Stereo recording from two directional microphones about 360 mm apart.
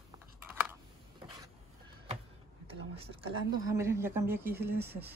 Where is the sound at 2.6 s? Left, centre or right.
Centre.